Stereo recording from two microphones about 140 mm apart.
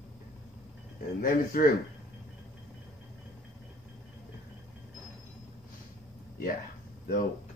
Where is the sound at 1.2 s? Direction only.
90° left.